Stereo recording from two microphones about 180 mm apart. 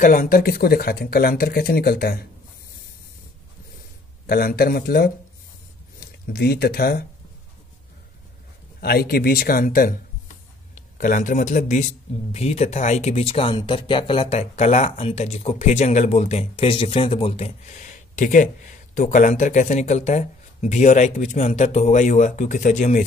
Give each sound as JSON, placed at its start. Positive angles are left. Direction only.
{"t": 0.0, "sound": "speech", "side_deg": 50}
{"t": 4.3, "sound": "speech", "side_deg": 55}
{"t": 8.8, "sound": "speech", "side_deg": 55}